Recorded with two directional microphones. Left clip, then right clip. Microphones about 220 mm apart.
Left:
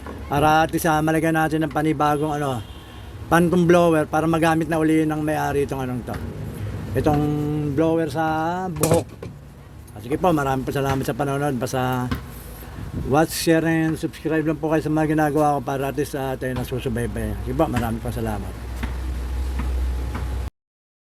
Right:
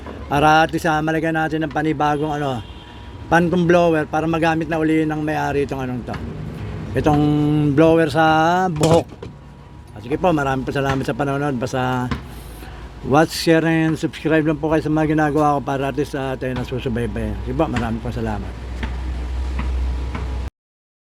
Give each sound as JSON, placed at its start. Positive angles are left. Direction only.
{"t": 0.3, "sound": "speech", "side_deg": 0}
{"t": 6.9, "sound": "mantra", "side_deg": -5}
{"t": 10.1, "sound": "speech", "side_deg": 0}
{"t": 13.1, "sound": "speech", "side_deg": -5}